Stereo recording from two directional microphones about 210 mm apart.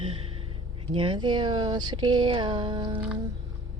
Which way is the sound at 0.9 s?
25° right (ahead or behind).